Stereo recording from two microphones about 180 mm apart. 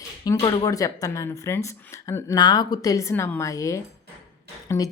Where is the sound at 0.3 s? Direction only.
20° left (ahead or behind).